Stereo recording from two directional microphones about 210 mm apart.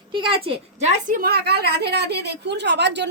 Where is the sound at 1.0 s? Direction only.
40° right (ahead or behind).